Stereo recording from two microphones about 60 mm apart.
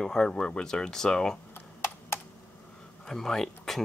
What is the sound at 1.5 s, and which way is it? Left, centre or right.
Computer keyboard, left.